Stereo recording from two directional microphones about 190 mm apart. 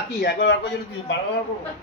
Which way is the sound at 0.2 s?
75° left (ahead or behind).